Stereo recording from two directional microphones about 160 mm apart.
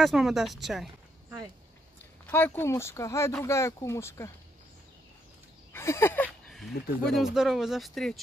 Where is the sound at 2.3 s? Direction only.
15° left (ahead or behind).